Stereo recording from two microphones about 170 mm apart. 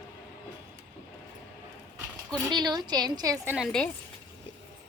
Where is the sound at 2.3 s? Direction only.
25° right (ahead or behind).